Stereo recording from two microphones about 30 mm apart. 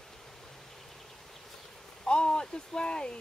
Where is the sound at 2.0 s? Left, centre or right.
Left.